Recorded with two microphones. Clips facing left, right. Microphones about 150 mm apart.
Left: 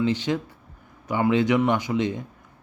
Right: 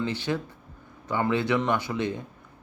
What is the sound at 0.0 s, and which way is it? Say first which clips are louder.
A man's voice: left 5 dB; 15° left (ahead or behind).